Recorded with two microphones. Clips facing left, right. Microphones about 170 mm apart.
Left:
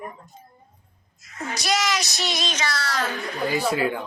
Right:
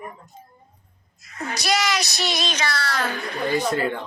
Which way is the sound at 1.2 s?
65° right (ahead or behind).